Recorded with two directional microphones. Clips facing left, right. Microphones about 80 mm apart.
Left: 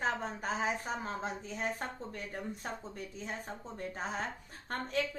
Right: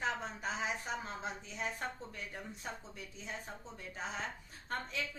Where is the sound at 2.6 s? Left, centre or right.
Left.